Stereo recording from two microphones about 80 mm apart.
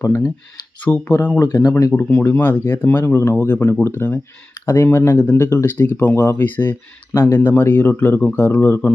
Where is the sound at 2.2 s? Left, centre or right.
Left.